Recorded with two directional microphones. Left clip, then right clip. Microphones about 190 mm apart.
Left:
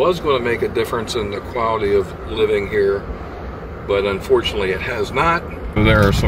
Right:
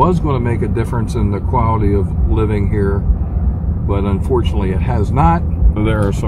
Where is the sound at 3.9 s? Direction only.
20° right (ahead or behind).